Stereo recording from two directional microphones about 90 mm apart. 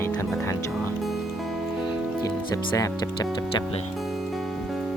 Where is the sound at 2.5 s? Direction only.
35° left (ahead or behind).